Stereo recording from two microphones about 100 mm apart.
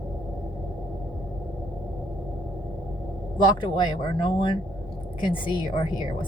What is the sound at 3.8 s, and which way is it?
Speech, 50° left (ahead or behind).